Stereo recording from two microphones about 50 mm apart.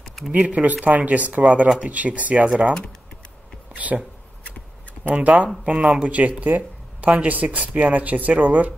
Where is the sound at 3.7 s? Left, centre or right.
Right.